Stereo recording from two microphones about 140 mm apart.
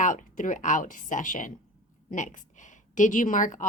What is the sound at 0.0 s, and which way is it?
A woman's voice, 65° left (ahead or behind).